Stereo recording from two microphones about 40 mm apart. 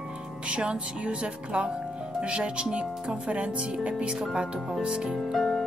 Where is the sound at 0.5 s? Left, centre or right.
Right.